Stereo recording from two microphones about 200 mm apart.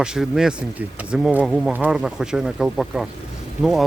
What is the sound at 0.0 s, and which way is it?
Speech, 5° right (ahead or behind).